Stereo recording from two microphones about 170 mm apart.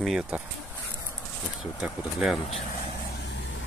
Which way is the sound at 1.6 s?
5° right (ahead or behind).